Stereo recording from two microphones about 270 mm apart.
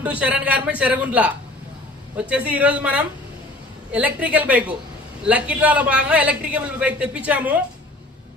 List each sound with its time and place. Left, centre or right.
0.0 s a man's voice: centre